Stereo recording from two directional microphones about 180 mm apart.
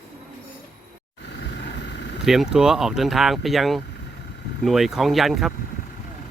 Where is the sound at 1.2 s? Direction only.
75° left (ahead or behind).